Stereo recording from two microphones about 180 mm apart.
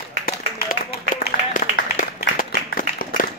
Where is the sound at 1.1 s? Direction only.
50° left (ahead or behind).